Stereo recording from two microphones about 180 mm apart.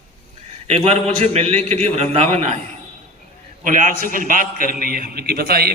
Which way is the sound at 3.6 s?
45° right (ahead or behind).